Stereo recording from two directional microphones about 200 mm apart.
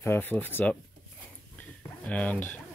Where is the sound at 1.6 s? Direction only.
5° left (ahead or behind).